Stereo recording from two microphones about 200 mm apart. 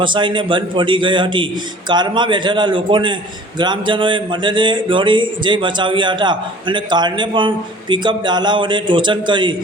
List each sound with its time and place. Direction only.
0.0 s speech: 25° right (ahead or behind)